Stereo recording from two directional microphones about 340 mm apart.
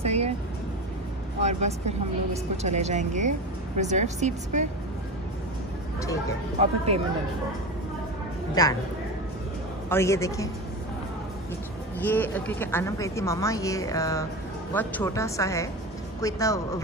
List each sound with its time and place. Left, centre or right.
0.0 s music: centre
1.4 s speech: centre
6.6 s speech: centre
8.6 s speech: centre
9.8 s speech: centre
12.0 s speech: centre